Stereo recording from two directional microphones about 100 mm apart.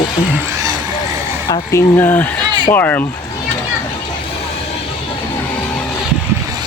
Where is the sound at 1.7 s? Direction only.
20° left (ahead or behind).